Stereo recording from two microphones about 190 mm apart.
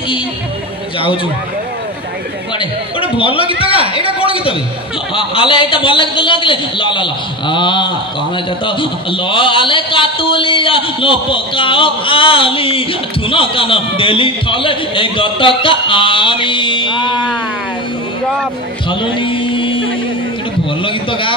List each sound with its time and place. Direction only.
2.6 s a man's voice: 30° left (ahead or behind)
18.9 s music: 25° left (ahead or behind)
20.8 s a sound: 25° left (ahead or behind)